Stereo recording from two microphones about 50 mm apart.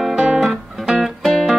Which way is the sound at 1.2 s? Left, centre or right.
Centre.